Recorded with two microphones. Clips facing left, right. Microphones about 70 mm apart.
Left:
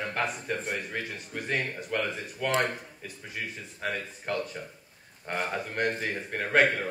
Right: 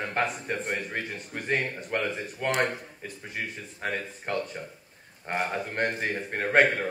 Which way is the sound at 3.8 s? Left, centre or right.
Right.